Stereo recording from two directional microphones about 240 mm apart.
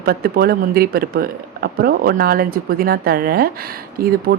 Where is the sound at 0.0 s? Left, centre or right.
Right.